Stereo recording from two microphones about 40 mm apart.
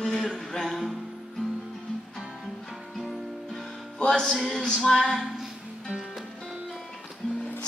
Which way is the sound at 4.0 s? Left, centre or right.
Centre.